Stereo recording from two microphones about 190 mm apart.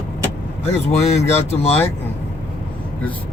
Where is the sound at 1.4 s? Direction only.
30° left (ahead or behind).